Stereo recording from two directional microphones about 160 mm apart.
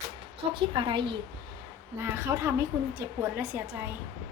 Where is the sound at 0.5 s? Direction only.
30° right (ahead or behind).